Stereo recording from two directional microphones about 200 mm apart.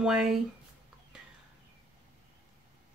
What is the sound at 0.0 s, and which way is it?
Speech, 5° right (ahead or behind).